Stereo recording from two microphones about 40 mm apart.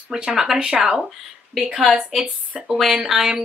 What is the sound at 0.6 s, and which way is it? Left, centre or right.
Speech, right.